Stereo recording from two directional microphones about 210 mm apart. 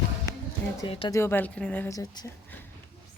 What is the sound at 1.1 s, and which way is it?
Speech, 10° left (ahead or behind).